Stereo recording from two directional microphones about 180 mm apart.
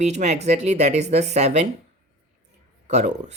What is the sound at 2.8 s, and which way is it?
Speech, 40° right (ahead or behind).